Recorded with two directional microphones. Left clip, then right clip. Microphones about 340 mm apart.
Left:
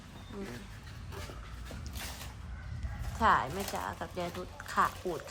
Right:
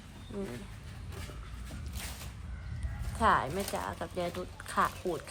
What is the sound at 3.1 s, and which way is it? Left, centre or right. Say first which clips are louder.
A woman's voice: even; centre.